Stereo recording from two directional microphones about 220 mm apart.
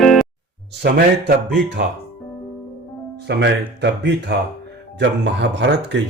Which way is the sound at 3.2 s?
50° right (ahead or behind).